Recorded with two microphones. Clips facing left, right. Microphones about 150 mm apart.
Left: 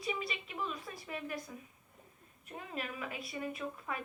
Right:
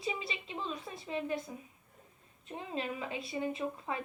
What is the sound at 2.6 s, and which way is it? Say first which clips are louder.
A woman's voice: right 4 dB; 25° right (ahead or behind).